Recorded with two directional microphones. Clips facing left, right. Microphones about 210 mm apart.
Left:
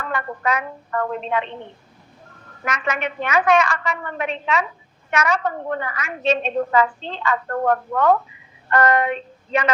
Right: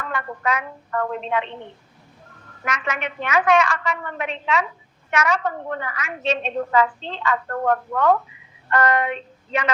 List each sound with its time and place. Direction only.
0.0 s a woman's voice: 40° left (ahead or behind)
2.6 s a woman's voice: 40° left (ahead or behind)
8.7 s a sound: 45° left (ahead or behind)